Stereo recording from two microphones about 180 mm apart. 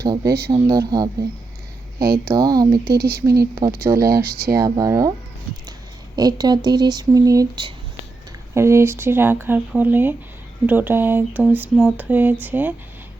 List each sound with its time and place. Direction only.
0.0 s speech: 20° right (ahead or behind)
2.0 s speech: 55° right (ahead or behind)
2.2 s speech: 20° right (ahead or behind)
2.9 s speech: 60° right (ahead or behind)
3.6 s speech: 20° right (ahead or behind)
3.9 s speech: 60° right (ahead or behind)
4.5 s speech: 20° right (ahead or behind)
6.1 s speech: 20° right (ahead or behind)